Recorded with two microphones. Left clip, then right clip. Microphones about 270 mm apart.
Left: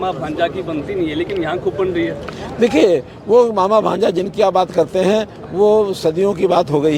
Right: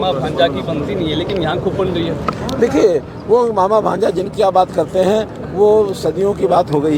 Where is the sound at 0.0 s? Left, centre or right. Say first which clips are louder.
Right 4 dB; left.